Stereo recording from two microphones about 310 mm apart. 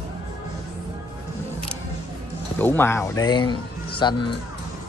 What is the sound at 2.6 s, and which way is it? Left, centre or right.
Speech, centre.